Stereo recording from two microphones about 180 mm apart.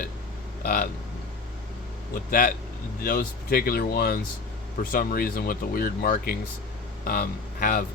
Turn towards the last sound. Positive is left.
turn(degrees=50)  # may be behind; listen again after turning